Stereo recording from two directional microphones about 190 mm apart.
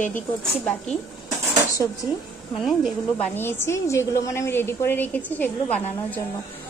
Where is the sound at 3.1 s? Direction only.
10° left (ahead or behind).